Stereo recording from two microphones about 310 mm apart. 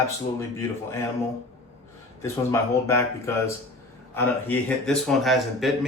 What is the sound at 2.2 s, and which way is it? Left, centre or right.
A man's voice, centre.